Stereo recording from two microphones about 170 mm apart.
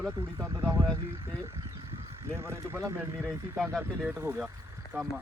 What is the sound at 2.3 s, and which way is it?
Speech, 15° right (ahead or behind).